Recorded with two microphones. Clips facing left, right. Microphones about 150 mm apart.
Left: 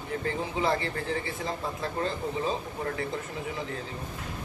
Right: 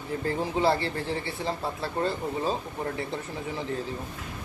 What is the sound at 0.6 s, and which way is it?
Speech, 35° right (ahead or behind).